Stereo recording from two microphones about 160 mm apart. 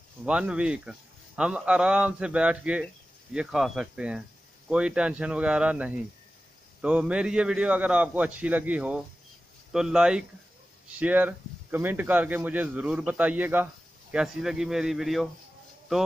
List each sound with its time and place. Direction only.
0.2 s a man's voice: 5° right (ahead or behind)